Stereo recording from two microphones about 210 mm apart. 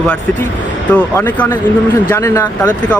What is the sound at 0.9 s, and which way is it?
A man's voice, 10° left (ahead or behind).